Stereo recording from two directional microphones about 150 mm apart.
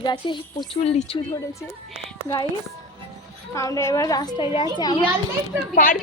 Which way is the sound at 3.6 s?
20° left (ahead or behind).